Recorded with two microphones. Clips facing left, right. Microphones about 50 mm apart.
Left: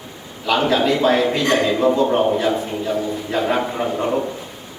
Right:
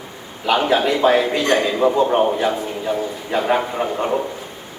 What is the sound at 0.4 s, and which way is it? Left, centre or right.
A man's voice, right.